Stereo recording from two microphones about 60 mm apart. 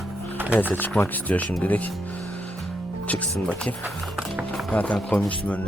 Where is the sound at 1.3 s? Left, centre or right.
Left.